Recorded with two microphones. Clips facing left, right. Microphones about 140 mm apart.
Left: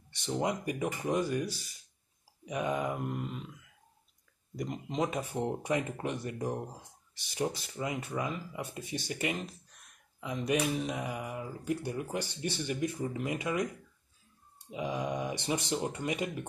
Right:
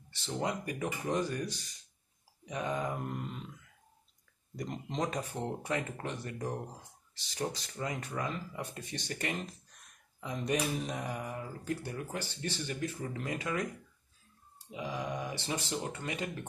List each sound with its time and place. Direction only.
0.1 s speech: 20° left (ahead or behind)
4.6 s speech: 5° left (ahead or behind)
14.7 s speech: 20° left (ahead or behind)